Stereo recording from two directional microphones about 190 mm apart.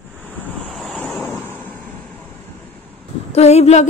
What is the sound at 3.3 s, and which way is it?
Speech, 35° left (ahead or behind).